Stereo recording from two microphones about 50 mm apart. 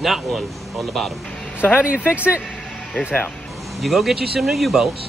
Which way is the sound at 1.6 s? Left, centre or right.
Left.